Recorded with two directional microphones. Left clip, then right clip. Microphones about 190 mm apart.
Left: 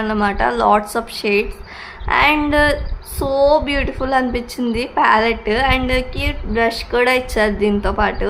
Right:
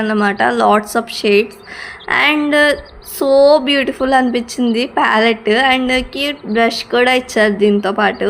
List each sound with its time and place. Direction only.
0.0 s a woman's voice: 15° right (ahead or behind)